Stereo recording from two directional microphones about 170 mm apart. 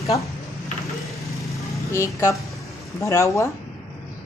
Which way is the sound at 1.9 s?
15° left (ahead or behind).